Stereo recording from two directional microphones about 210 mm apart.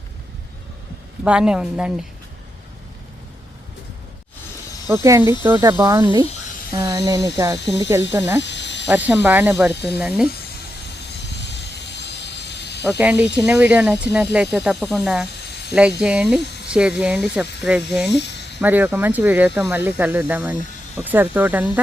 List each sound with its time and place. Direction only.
1.2 s speech: 5° right (ahead or behind)
4.9 s speech: 15° right (ahead or behind)
8.4 s cricket: 55° left (ahead or behind)
9.0 s speech: 10° right (ahead or behind)
11.1 s vehicle: 55° left (ahead or behind)
12.8 s speech: 10° right (ahead or behind)
18.1 s a sound: 55° left (ahead or behind)
18.6 s speech: 10° right (ahead or behind)